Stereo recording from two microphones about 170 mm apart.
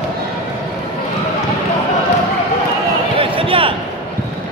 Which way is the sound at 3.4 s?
30° right (ahead or behind).